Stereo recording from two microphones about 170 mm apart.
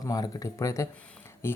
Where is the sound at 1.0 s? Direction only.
10° left (ahead or behind).